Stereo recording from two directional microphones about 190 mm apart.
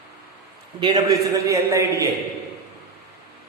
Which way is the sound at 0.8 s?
20° right (ahead or behind).